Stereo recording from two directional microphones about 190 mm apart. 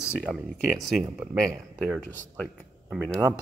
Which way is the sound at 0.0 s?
Centre (ahead or behind).